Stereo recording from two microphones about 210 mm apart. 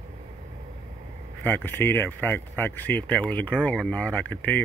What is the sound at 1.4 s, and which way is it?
Speech, 10° left (ahead or behind).